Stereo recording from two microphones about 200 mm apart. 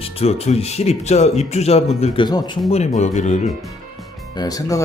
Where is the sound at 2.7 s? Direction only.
35° left (ahead or behind).